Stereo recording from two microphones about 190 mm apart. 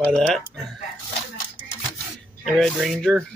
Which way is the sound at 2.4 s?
Centre (ahead or behind).